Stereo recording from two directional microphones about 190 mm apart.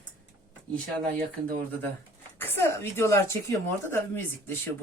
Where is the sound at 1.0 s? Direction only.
50° right (ahead or behind).